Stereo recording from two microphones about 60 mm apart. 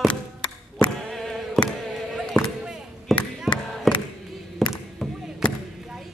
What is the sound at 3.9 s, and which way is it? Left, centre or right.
Music, centre.